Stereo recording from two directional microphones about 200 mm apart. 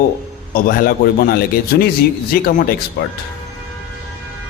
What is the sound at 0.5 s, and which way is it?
A man's voice, 45° left (ahead or behind).